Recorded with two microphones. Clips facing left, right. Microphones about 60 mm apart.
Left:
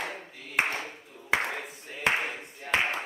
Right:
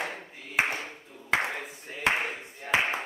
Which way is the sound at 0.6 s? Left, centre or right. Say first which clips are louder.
Right 1 dB; centre.